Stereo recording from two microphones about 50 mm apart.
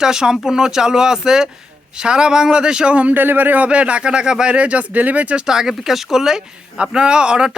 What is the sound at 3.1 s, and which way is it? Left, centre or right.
Speech, right.